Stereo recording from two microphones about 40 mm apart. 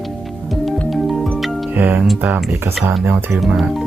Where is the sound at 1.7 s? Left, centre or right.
Right.